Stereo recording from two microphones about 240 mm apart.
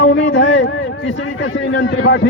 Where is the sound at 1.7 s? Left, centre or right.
Left.